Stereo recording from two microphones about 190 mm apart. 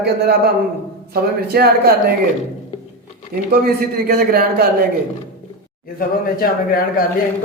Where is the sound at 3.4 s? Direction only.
50° right (ahead or behind).